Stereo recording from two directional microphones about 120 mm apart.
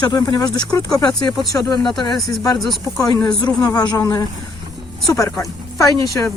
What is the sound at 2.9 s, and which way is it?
Speech, 35° left (ahead or behind).